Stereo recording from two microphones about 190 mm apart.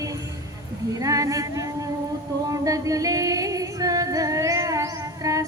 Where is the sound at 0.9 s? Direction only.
15° right (ahead or behind).